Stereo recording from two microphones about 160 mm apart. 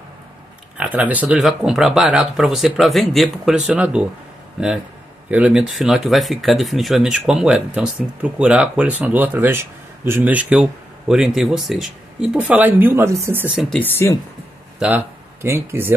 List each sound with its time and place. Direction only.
0.7 s speech: 10° right (ahead or behind)
5.3 s speech: 5° right (ahead or behind)
13.6 s speech: 5° left (ahead or behind)
14.8 s speech: 10° right (ahead or behind)